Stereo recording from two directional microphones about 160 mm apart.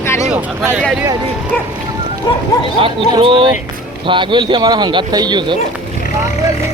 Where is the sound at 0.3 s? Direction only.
10° right (ahead or behind).